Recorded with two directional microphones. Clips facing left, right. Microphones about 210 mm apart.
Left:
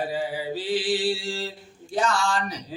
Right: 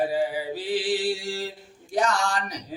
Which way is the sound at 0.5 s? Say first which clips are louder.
Left 3 dB; 15° right (ahead or behind).